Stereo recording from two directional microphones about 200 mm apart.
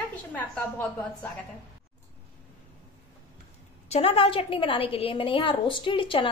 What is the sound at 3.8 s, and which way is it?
A woman's voice, 30° left (ahead or behind).